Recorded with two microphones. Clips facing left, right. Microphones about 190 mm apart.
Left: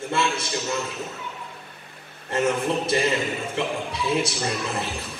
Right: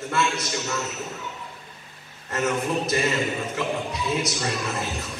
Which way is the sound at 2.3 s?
30° left (ahead or behind).